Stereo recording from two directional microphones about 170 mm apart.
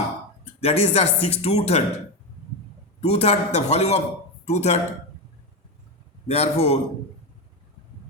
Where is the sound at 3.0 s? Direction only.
35° left (ahead or behind).